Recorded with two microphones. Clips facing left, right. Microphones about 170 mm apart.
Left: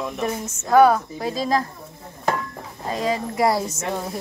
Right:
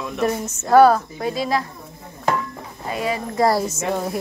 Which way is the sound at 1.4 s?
40° left (ahead or behind).